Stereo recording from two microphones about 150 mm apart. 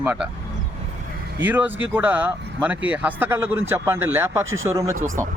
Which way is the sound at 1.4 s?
10° right (ahead or behind).